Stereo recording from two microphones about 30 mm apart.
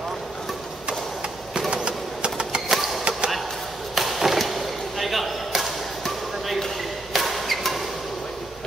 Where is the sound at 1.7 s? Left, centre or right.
Right.